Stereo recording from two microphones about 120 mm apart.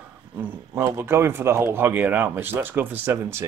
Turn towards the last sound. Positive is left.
turn(degrees=-20)  # may be behind; listen again after turning